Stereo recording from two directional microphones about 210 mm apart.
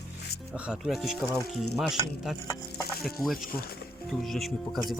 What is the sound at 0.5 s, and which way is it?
Speech, 5° right (ahead or behind).